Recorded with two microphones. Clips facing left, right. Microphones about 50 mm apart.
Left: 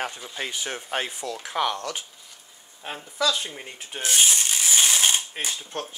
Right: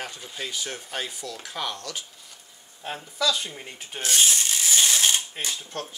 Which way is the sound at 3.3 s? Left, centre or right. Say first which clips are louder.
Left 1 dB; centre.